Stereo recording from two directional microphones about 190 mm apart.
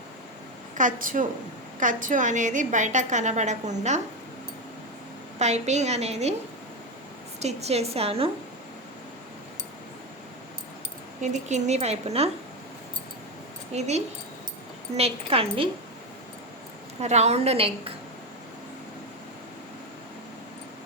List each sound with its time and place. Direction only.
0.8 s a woman's voice: 45° right (ahead or behind)
5.4 s a woman's voice: 35° right (ahead or behind)
7.3 s a woman's voice: 35° right (ahead or behind)
11.2 s a woman's voice: 40° right (ahead or behind)
13.7 s a woman's voice: 35° right (ahead or behind)
17.0 s a woman's voice: 35° right (ahead or behind)